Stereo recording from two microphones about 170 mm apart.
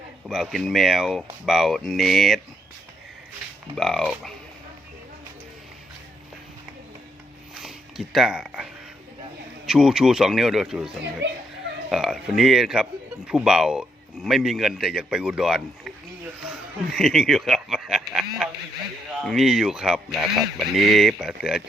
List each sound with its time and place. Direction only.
0.3 s a man's voice: centre (ahead or behind)
3.8 s a man's voice: centre (ahead or behind)
7.6 s speech: centre (ahead or behind)
9.6 s a man's voice: 5° right (ahead or behind)
11.2 s speech: 90° right
11.9 s a man's voice: centre (ahead or behind)